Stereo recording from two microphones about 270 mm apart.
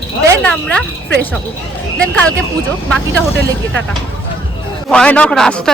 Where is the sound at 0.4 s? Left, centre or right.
Centre.